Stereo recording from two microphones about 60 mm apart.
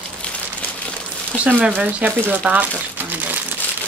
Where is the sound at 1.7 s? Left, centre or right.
Right.